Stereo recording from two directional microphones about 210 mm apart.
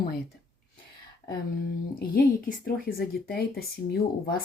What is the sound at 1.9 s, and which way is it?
Speech, 45° left (ahead or behind).